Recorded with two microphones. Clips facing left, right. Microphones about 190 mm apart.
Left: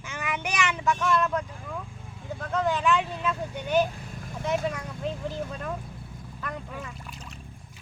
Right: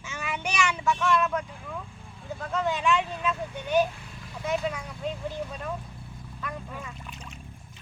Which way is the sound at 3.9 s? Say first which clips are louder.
Left 4 dB; 45° left (ahead or behind).